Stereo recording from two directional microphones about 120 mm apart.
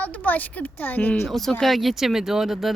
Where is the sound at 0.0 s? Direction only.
15° left (ahead or behind).